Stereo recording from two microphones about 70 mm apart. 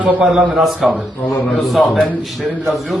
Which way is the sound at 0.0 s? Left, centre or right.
Right.